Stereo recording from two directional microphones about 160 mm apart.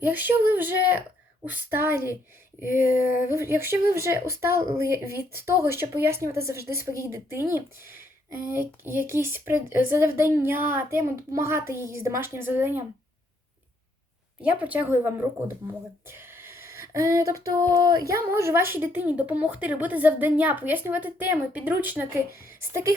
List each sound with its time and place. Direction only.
0.0 s speech: 10° right (ahead or behind)
14.4 s speech: 10° right (ahead or behind)
16.0 s a sound: 15° right (ahead or behind)
16.9 s speech: 20° right (ahead or behind)